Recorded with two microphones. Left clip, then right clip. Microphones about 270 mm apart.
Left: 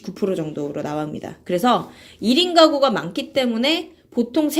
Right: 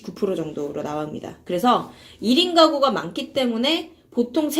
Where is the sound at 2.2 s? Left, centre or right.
Left.